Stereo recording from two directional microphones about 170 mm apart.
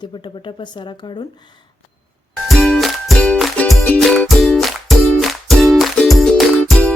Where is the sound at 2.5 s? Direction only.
Centre (ahead or behind).